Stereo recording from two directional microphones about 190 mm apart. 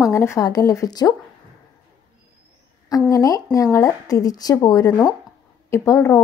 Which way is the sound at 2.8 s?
20° left (ahead or behind).